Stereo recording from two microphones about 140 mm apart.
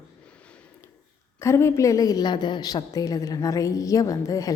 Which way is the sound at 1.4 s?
20° left (ahead or behind).